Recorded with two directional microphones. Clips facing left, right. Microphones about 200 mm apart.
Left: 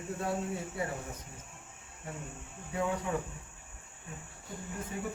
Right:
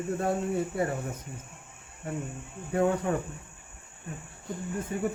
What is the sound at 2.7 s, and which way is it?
Speech, 55° right (ahead or behind).